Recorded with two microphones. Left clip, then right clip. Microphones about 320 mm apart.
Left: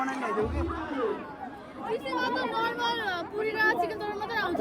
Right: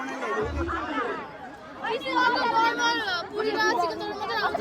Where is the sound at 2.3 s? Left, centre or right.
Right.